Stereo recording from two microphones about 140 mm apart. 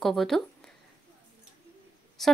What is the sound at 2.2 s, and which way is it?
Speech, centre (ahead or behind).